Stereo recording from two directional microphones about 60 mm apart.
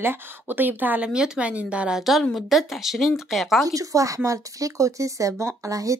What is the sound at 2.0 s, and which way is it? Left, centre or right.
Speech, centre.